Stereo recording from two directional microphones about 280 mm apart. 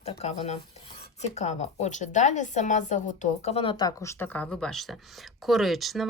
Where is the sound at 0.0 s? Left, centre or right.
Left.